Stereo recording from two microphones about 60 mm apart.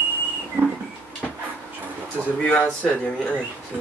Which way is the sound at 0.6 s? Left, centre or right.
Right.